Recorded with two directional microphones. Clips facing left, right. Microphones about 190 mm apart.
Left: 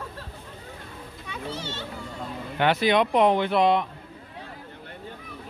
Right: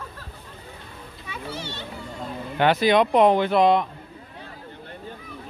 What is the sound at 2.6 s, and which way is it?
Speech, 40° right (ahead or behind).